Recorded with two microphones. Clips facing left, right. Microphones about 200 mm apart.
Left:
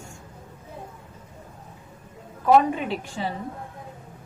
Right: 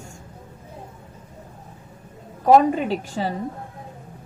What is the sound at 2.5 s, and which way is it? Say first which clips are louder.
Speech: right 3 dB; 40° right (ahead or behind).